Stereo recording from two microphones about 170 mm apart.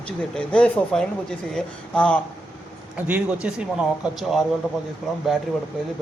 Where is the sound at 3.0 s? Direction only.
10° right (ahead or behind).